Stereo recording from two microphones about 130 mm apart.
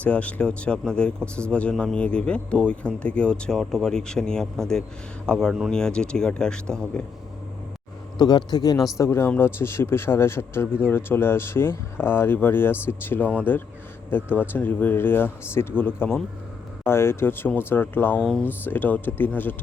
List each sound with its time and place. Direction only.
0.0 s speech: 10° left (ahead or behind)
8.2 s speech: 30° left (ahead or behind)
9.0 s speech: 20° left (ahead or behind)
18.2 s speech: centre (ahead or behind)
18.4 s speech: 15° left (ahead or behind)